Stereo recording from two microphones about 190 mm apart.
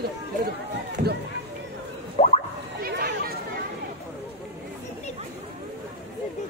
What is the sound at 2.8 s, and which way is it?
Chatter, 55° right (ahead or behind).